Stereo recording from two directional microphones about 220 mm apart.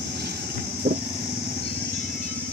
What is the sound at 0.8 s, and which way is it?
Vehicle, 45° right (ahead or behind).